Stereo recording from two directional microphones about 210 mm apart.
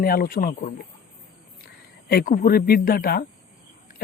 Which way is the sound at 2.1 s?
45° left (ahead or behind).